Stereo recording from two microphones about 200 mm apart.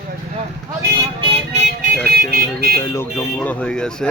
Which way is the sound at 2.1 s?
50° right (ahead or behind).